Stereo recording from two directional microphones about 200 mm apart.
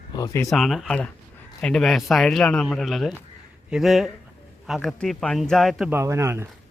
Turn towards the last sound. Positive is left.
turn(degrees=-15)  # may be behind; listen again after turning